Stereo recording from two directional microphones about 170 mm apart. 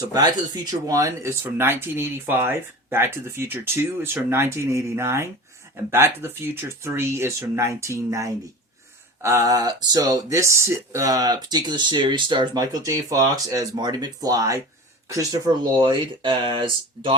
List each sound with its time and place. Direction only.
0.0 s speech: 20° right (ahead or behind)